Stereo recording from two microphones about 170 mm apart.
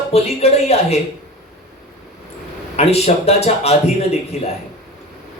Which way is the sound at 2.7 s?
40° left (ahead or behind).